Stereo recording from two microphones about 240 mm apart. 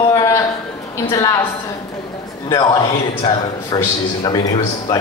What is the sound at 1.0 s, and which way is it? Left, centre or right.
Speech, centre.